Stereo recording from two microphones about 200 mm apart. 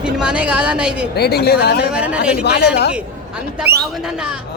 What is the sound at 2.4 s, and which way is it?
Speech, 55° left (ahead or behind).